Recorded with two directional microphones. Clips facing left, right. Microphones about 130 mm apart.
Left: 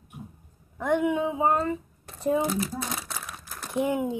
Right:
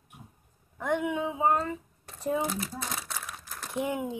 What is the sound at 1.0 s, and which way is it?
Speech, 35° left (ahead or behind).